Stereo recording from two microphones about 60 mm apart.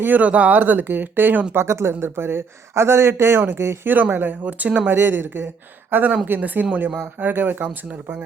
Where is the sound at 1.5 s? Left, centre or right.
Right.